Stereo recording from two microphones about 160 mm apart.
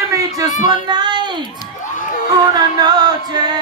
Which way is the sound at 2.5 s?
25° right (ahead or behind).